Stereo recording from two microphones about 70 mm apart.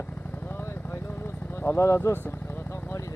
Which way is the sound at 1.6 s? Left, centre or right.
Left.